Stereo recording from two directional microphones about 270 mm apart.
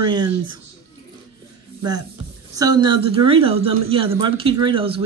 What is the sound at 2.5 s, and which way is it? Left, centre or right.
Speech, centre.